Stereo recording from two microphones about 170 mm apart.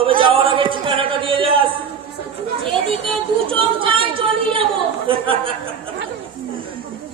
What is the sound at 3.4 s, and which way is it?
Chatter, 30° right (ahead or behind).